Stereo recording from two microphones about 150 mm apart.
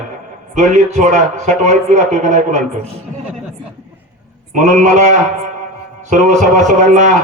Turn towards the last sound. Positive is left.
turn(degrees=-55)  # may be behind; listen again after turning